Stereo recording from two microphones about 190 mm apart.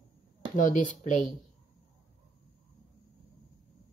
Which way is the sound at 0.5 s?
40° left (ahead or behind).